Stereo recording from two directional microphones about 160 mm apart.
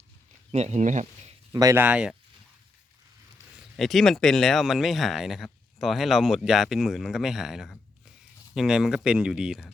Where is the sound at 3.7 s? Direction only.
Centre (ahead or behind).